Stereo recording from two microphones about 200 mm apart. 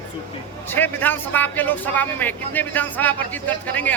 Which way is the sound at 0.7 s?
10° left (ahead or behind).